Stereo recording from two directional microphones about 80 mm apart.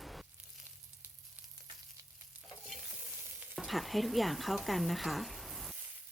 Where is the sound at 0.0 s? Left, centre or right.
Centre.